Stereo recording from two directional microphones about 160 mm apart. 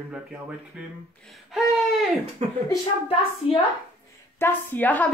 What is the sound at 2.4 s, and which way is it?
Speech, 40° right (ahead or behind).